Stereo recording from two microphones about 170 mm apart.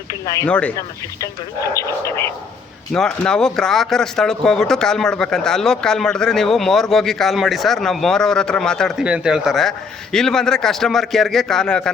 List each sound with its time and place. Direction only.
0.1 s speech: 20° left (ahead or behind)
0.4 s speech: 5° left (ahead or behind)
1.7 s speech: 15° left (ahead or behind)
2.9 s speech: 5° left (ahead or behind)